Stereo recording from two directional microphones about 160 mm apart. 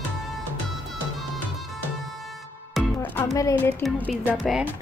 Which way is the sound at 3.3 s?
20° left (ahead or behind).